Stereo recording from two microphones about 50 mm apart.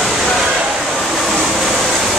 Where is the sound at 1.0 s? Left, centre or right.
Centre.